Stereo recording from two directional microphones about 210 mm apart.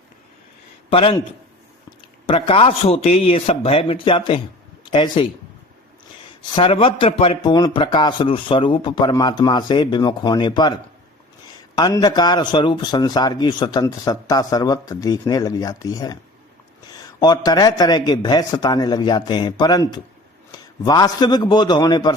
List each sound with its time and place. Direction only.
0.9 s a man's voice: 25° left (ahead or behind)
2.2 s a man's voice: 25° left (ahead or behind)
6.5 s a man's voice: 25° left (ahead or behind)
17.2 s a man's voice: 20° left (ahead or behind)